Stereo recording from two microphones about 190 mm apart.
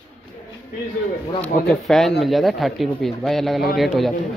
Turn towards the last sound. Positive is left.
turn(degrees=0)  # may be behind; listen again after turning